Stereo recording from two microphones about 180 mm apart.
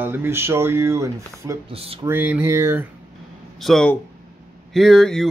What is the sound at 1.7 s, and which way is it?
Speech, 30° right (ahead or behind).